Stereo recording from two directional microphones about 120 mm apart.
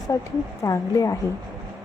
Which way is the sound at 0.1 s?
25° left (ahead or behind).